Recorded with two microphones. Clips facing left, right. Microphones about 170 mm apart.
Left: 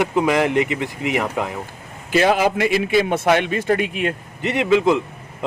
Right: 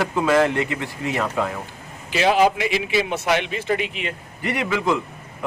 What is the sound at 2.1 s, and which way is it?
Speech, 50° left (ahead or behind).